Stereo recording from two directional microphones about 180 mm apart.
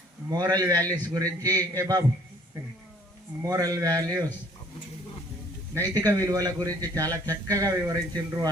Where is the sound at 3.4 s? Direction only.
20° right (ahead or behind).